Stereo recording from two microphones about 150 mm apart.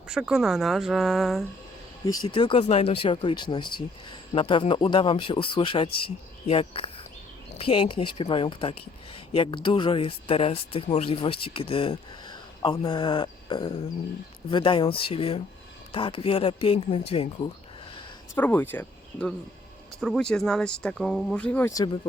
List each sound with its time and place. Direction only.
0.1 s speech: 5° right (ahead or behind)
2.2 s speech: 30° left (ahead or behind)
18.3 s speech: 10° left (ahead or behind)